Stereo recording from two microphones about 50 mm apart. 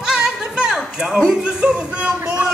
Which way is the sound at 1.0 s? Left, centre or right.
Centre.